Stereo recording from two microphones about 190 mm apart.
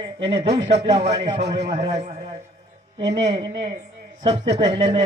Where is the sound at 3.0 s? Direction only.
65° right (ahead or behind).